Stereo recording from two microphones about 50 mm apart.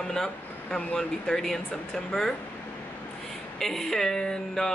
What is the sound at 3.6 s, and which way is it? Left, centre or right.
Speech, centre.